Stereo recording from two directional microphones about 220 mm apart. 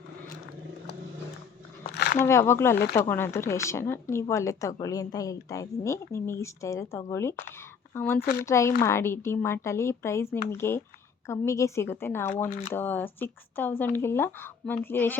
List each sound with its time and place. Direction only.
1.9 s a sound: 45° left (ahead or behind)
2.2 s a woman's voice: 10° left (ahead or behind)
8.2 s speech: 45° left (ahead or behind)
8.4 s a woman's voice: 15° left (ahead or behind)
12.5 s speech: 40° left (ahead or behind)
12.7 s a woman's voice: 10° left (ahead or behind)